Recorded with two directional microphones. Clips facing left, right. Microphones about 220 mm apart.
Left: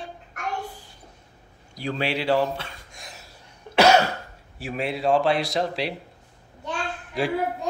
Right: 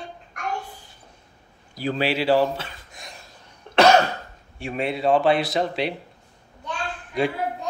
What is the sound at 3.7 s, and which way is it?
Cough, 10° left (ahead or behind).